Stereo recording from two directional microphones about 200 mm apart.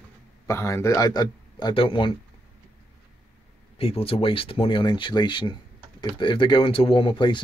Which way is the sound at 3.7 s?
30° left (ahead or behind).